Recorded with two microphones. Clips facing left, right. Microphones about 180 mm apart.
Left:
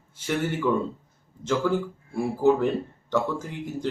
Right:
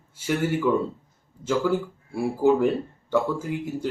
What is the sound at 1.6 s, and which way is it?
Speech, 10° right (ahead or behind).